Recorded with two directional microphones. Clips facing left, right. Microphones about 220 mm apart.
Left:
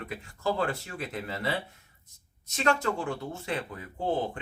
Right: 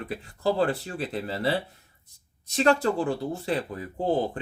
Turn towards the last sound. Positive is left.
turn(degrees=-35)  # may be behind; listen again after turning